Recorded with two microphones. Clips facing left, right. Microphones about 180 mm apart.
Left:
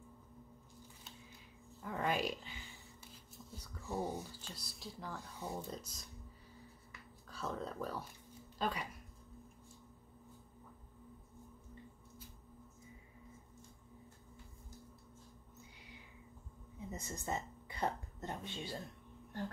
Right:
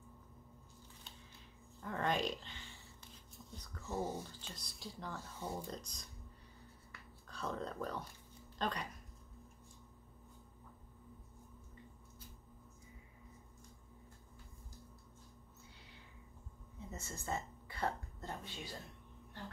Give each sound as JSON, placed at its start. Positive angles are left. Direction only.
{"t": 1.8, "sound": "a sound", "side_deg": 5}
{"t": 4.6, "sound": "speech", "side_deg": 0}
{"t": 7.2, "sound": "speech", "side_deg": 5}
{"t": 16.9, "sound": "speech", "side_deg": 15}